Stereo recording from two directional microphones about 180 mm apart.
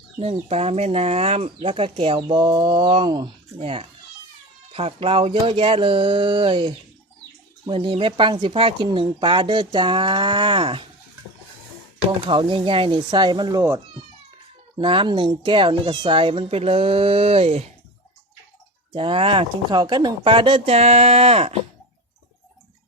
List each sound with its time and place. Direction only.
0.2 s speech: 35° right (ahead or behind)
12.2 s speech: 25° right (ahead or behind)
14.8 s speech: 30° right (ahead or behind)
18.9 s speech: 30° right (ahead or behind)